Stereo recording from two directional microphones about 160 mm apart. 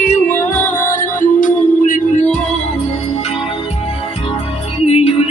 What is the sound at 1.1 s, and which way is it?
Music, 55° left (ahead or behind).